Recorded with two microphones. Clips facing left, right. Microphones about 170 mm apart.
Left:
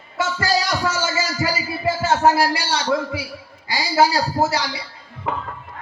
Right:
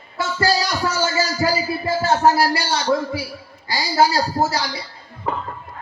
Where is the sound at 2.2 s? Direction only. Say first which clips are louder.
Right 1 dB; 40° right (ahead or behind).